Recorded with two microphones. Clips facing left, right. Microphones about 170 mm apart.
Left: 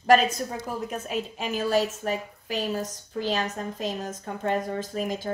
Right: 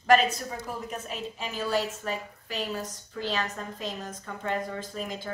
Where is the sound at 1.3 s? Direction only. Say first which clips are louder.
Left 4 dB; 50° left (ahead or behind).